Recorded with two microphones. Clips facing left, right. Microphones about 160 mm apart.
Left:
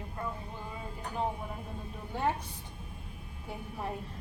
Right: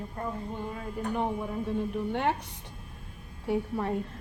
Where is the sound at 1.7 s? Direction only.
80° right.